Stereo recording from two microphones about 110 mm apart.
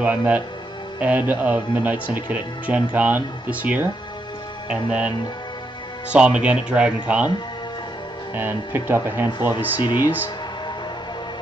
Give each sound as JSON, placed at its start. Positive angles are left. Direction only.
{"t": 0.0, "sound": "speech", "side_deg": -15}
{"t": 6.1, "sound": "speech", "side_deg": -10}
{"t": 8.4, "sound": "speech", "side_deg": -20}
{"t": 9.8, "sound": "speech", "side_deg": 40}